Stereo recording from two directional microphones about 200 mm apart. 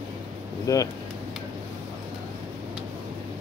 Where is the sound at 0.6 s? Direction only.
15° left (ahead or behind).